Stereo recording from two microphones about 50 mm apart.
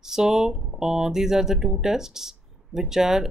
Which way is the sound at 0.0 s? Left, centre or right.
Centre.